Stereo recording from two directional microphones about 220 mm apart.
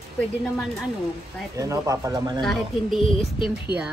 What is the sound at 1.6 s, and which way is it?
Speech, 15° right (ahead or behind).